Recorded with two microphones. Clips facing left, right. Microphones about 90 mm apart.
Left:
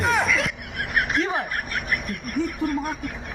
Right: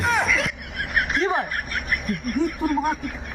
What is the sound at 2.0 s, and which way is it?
Speech, centre (ahead or behind).